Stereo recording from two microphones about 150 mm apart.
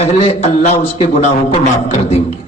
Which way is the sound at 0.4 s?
50° left (ahead or behind).